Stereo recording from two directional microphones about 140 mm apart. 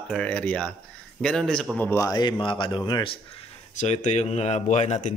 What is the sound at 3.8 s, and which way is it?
Speech, 55° left (ahead or behind).